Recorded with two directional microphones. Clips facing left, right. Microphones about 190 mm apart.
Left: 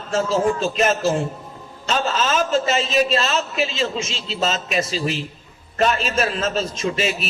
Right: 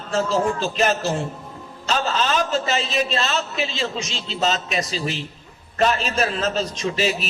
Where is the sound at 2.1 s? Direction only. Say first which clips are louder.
Left 3 dB; 35° right (ahead or behind).